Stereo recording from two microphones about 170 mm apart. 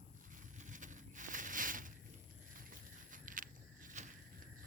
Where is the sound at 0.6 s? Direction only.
50° right (ahead or behind).